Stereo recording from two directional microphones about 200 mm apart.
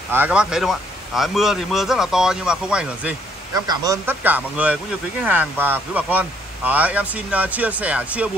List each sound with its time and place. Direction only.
0.1 s a man's voice: 5° right (ahead or behind)
3.5 s speech: 20° right (ahead or behind)